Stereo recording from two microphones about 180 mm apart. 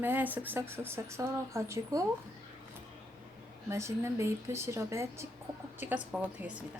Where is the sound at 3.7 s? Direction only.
15° right (ahead or behind).